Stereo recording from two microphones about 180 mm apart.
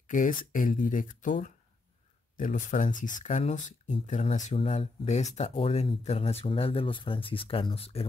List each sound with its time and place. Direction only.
0.1 s speech: 45° left (ahead or behind)